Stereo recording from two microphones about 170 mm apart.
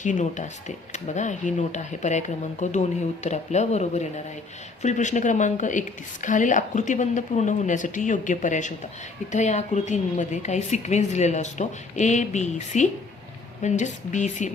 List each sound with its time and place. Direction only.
0.0 s a woman's voice: 45° left (ahead or behind)